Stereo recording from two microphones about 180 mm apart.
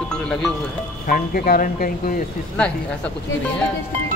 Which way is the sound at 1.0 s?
55° left (ahead or behind).